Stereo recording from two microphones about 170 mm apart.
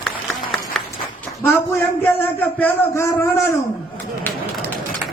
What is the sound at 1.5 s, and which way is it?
A man's voice, 15° left (ahead or behind).